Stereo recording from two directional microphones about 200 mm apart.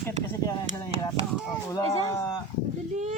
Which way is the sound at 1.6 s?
15° left (ahead or behind).